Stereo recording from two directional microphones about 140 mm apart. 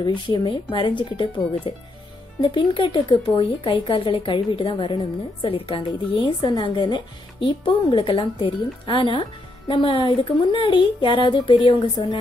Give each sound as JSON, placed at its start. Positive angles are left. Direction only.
{"t": 0.0, "sound": "a woman's voice", "side_deg": 30}